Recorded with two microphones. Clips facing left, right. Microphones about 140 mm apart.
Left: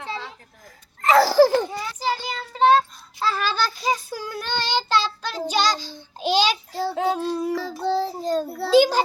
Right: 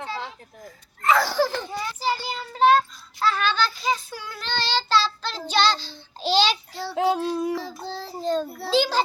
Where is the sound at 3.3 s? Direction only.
35° left (ahead or behind).